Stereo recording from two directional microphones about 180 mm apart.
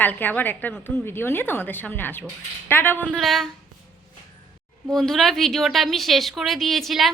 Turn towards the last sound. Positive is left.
turn(degrees=0)  # may be behind; listen again after turning